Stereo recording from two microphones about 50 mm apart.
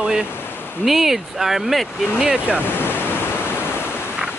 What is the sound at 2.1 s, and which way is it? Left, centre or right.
Speech, centre.